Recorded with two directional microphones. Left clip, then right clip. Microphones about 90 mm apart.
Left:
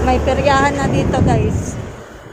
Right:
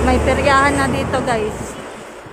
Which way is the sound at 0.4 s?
20° right (ahead or behind).